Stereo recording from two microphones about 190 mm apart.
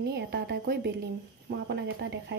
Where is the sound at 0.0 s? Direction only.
65° right (ahead or behind).